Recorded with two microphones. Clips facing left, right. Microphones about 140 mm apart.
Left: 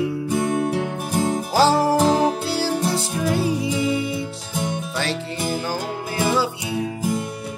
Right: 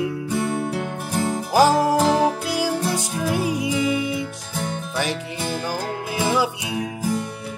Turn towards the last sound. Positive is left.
turn(degrees=-15)  # may be behind; listen again after turning